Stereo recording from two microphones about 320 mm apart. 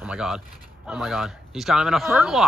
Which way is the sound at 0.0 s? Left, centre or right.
Centre.